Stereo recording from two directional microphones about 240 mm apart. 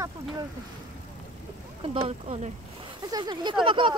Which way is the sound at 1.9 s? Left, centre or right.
Right.